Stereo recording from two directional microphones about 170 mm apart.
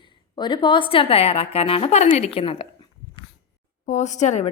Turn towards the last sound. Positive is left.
turn(degrees=45)  # may be behind; listen again after turning